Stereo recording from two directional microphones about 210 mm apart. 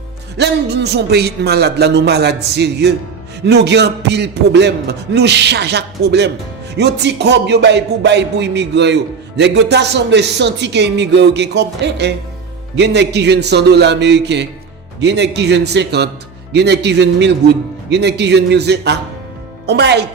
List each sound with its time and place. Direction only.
0.3 s a man's voice: 55° right (ahead or behind)